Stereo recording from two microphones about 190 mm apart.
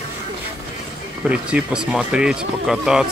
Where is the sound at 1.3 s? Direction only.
5° right (ahead or behind).